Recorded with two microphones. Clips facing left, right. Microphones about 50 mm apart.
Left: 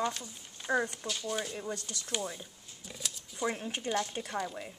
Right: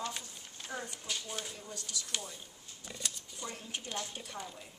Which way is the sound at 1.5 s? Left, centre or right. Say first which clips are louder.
Left 6 dB; left.